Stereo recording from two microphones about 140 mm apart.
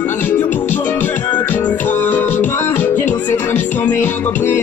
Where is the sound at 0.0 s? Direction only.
15° left (ahead or behind).